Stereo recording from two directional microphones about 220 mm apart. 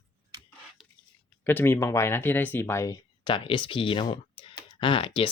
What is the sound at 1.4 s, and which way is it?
Speech, 10° left (ahead or behind).